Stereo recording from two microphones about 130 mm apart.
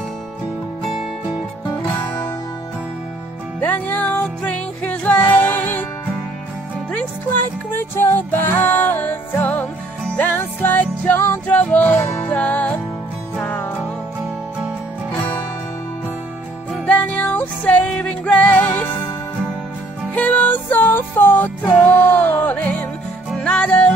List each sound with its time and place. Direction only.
1.7 s music: 25° left (ahead or behind)
3.6 s music: 15° left (ahead or behind)
6.9 s music: 15° left (ahead or behind)
16.8 s music: 10° left (ahead or behind)
20.2 s music: 10° left (ahead or behind)